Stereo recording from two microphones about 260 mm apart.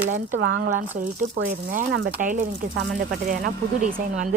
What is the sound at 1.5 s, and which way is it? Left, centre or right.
Speech, right.